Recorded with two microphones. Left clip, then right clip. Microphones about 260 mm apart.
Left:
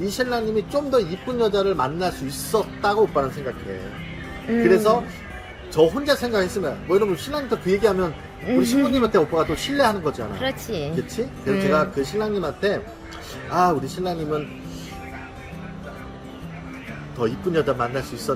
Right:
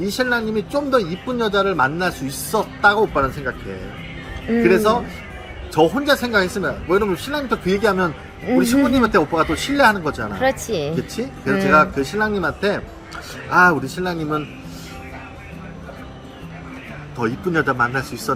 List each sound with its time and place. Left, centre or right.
0.0 s speech: centre
4.6 s speech: centre
11.8 s speech: centre
17.2 s speech: centre